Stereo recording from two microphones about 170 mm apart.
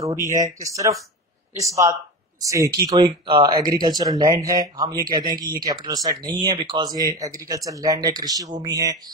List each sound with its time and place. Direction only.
0.0 s speech: 20° right (ahead or behind)
2.4 s speech: 20° right (ahead or behind)